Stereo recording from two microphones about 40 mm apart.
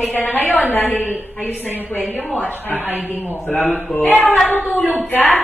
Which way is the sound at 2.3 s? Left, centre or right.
Left.